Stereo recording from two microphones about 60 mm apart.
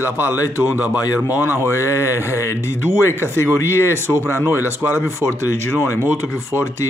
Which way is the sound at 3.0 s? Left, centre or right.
Left.